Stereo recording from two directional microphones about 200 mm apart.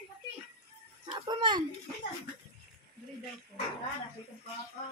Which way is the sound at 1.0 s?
25° right (ahead or behind).